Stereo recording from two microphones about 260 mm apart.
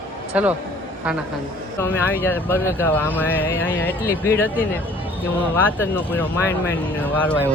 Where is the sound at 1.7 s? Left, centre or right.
Centre.